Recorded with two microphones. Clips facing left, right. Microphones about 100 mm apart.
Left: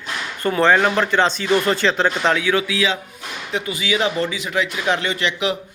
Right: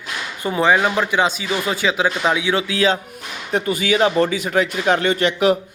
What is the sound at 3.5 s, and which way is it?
A man's voice, 45° right (ahead or behind).